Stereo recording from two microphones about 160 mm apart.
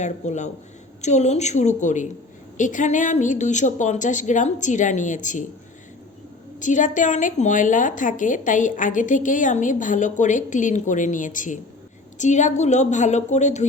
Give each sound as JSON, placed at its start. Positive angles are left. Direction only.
{"t": 0.0, "sound": "a woman's voice", "side_deg": 50}
{"t": 6.6, "sound": "a woman's voice", "side_deg": 50}